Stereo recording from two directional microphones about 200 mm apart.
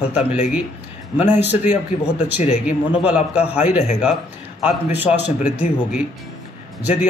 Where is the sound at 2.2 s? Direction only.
40° left (ahead or behind).